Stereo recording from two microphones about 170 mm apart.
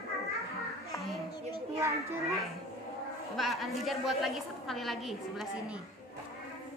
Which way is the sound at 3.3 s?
Centre (ahead or behind).